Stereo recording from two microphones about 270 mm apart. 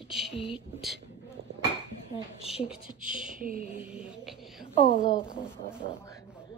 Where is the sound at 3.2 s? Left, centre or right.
Right.